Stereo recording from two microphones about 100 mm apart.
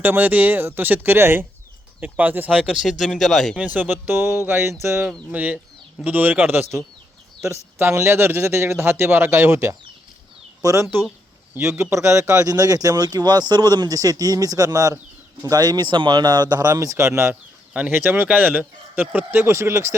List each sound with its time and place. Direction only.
0.0 s a man's voice: 20° right (ahead or behind); by 3.6 s centre (ahead or behind)
3.8 s a man's voice: 20° right (ahead or behind)
17.7 s a man's voice: 20° right (ahead or behind)